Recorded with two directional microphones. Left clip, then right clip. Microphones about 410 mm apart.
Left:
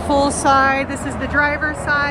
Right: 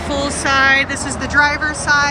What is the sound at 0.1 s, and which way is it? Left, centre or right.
Speech, left.